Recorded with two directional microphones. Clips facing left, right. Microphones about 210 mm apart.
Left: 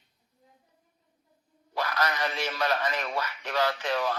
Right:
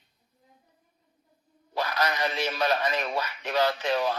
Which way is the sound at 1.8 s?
20° right (ahead or behind).